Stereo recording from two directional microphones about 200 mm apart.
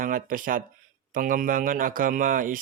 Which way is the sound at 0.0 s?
45° right (ahead or behind).